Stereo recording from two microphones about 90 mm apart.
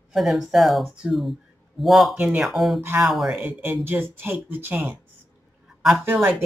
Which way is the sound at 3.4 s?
20° right (ahead or behind).